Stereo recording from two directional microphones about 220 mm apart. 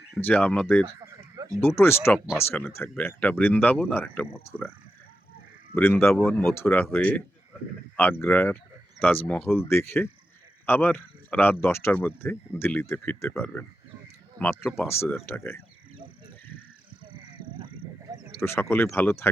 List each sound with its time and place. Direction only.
0.2 s speech: 10° left (ahead or behind)
2.1 s speech: 5° right (ahead or behind)
2.4 s speech: 10° left (ahead or behind)
5.7 s speech: 10° left (ahead or behind)
14.4 s speech: 15° right (ahead or behind)
14.8 s speech: 10° left (ahead or behind)
18.3 s speech: 10° left (ahead or behind)